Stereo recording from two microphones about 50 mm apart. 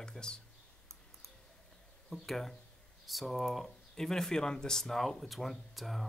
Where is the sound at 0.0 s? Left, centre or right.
Centre.